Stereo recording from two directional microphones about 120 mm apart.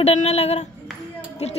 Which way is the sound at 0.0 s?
65° left (ahead or behind).